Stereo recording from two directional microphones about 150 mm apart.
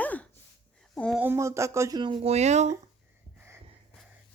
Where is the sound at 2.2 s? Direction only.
45° right (ahead or behind).